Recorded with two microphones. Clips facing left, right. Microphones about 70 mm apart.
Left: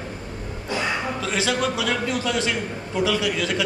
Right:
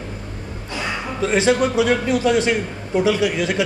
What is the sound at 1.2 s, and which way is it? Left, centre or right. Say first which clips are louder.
A man's voice: right 10 dB; right.